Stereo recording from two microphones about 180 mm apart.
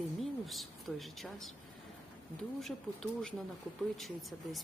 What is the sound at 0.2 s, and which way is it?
Speech, centre (ahead or behind).